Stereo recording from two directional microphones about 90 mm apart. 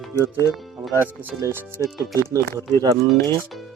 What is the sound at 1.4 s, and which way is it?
Speech, 35° right (ahead or behind).